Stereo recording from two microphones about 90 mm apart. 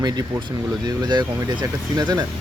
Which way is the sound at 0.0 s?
50° right (ahead or behind).